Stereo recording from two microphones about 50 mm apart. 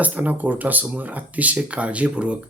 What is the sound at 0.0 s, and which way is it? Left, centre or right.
Speech, right.